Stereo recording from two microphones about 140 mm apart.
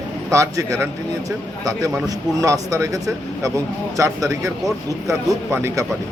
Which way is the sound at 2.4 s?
25° right (ahead or behind).